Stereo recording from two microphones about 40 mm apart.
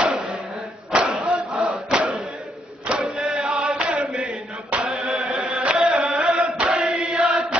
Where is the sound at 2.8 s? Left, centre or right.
Right.